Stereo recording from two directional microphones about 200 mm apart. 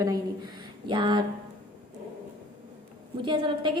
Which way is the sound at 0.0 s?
20° right (ahead or behind).